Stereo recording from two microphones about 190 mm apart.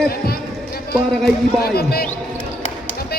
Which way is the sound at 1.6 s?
55° left (ahead or behind).